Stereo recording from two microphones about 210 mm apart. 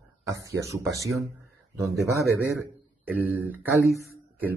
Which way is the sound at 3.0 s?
5° right (ahead or behind).